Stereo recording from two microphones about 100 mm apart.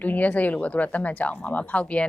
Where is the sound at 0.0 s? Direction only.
15° left (ahead or behind).